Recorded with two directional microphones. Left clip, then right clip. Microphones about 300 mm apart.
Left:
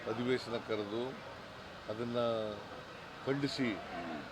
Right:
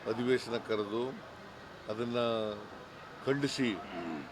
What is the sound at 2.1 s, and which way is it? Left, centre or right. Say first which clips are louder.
Speech: right 2 dB; centre.